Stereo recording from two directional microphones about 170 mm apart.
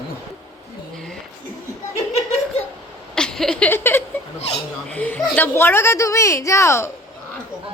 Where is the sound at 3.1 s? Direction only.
5° left (ahead or behind).